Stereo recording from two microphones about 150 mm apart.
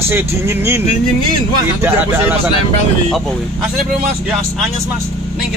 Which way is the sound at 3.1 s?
5° left (ahead or behind).